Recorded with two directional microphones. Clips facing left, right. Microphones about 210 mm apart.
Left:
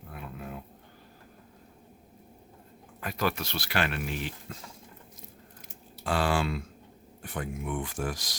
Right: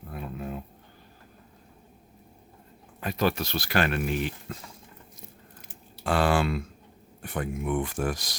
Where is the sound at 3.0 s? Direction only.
25° right (ahead or behind); by 4.3 s 50° right (ahead or behind).